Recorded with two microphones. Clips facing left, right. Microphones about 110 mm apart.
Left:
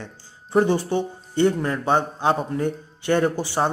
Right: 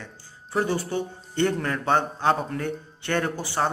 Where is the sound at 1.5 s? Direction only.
5° left (ahead or behind).